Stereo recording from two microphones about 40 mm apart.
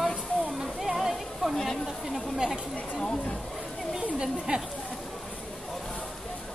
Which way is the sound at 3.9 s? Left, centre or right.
Centre.